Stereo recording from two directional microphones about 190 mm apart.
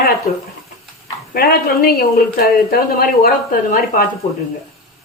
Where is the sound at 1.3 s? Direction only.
50° left (ahead or behind).